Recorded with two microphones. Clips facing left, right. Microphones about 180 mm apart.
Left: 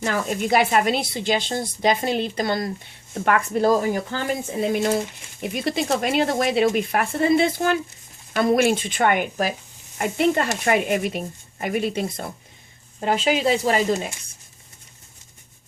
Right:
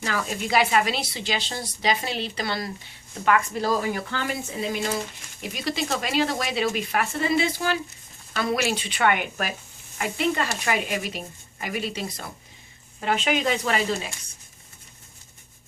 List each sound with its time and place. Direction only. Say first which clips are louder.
0.3 s a woman's voice: left 3 dB; 50° left (ahead or behind)
10.0 s a woman's voice: left 5 dB; 50° left (ahead or behind)
13.0 s speech: left 3 dB; 35° left (ahead or behind)